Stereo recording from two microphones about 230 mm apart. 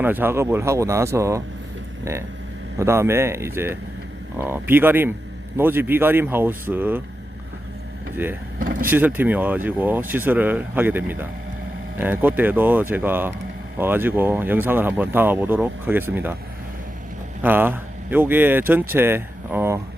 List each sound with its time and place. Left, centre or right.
0.0 s speech: centre
2.7 s speech: centre
8.2 s speech: centre
8.5 s vehicle: right
8.9 s speech: centre
17.4 s speech: centre